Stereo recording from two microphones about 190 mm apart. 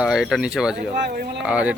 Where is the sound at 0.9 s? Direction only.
60° right (ahead or behind).